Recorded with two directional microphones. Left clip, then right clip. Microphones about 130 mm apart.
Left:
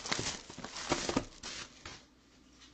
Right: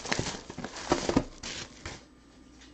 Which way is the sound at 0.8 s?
15° left (ahead or behind).